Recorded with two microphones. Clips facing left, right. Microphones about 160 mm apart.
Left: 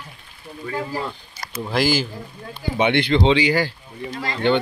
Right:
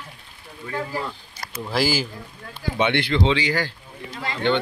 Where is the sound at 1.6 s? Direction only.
5° right (ahead or behind).